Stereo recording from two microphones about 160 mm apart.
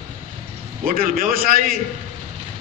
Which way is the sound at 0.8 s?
65° right (ahead or behind).